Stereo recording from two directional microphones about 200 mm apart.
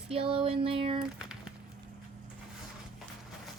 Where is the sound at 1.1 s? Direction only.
5° right (ahead or behind).